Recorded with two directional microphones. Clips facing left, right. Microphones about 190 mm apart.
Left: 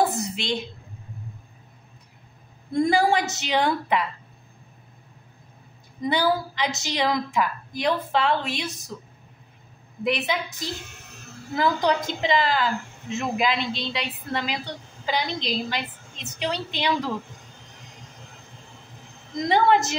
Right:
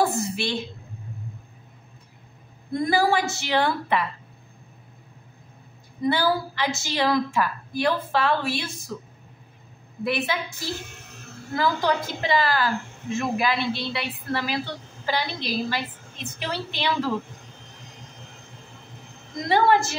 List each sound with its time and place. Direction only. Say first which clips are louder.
0.0 s a sound: right 1 dB; 20° left (ahead or behind)
2.9 s a woman's voice: right 2 dB; 20° left (ahead or behind)
6.0 s a woman's voice: even; 15° left (ahead or behind)
10.0 s a woman's voice: left 1 dB; 20° left (ahead or behind)
19.5 s a woman's voice: even; 20° left (ahead or behind)